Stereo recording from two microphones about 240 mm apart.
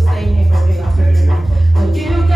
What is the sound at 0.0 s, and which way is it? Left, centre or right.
Music, centre.